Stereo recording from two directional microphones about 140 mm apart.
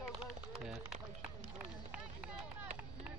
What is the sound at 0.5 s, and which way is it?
Speech, 5° right (ahead or behind).